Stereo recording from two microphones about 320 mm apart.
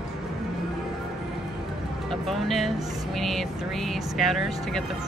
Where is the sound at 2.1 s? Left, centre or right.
Centre.